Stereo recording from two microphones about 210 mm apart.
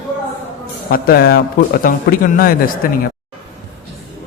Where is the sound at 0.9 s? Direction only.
45° left (ahead or behind).